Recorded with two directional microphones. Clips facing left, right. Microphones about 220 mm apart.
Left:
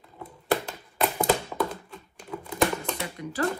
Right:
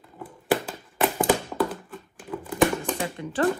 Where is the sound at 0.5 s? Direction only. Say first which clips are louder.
Right 2 dB; 5° right (ahead or behind).